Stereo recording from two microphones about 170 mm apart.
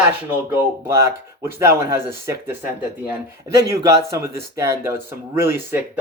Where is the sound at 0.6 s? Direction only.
15° right (ahead or behind).